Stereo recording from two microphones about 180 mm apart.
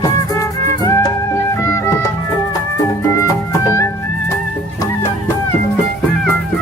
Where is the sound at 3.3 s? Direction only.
15° left (ahead or behind).